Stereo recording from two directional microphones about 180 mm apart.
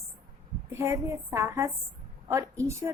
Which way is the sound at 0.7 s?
10° right (ahead or behind).